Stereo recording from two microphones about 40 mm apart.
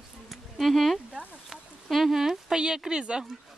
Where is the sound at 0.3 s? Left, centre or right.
Centre.